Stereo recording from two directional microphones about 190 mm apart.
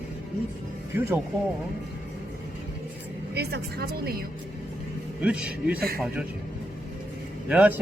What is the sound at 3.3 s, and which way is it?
Speech, 60° right (ahead or behind).